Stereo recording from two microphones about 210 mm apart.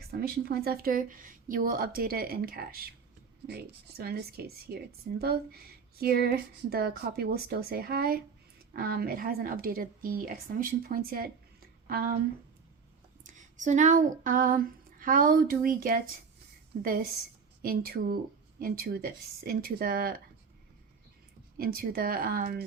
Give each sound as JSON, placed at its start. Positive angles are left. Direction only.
{"t": 0.1, "sound": "speech", "side_deg": -50}
{"t": 13.2, "sound": "a sound", "side_deg": -35}
{"t": 17.6, "sound": "speech", "side_deg": -45}
{"t": 21.6, "sound": "speech", "side_deg": -45}